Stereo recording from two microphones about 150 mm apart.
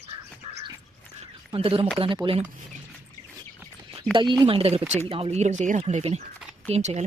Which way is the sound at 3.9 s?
35° right (ahead or behind).